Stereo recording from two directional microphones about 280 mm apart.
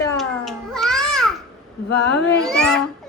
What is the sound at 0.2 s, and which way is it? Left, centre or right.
Babbling, centre.